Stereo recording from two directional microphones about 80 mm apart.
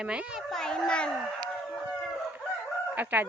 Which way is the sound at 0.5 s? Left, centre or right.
Centre.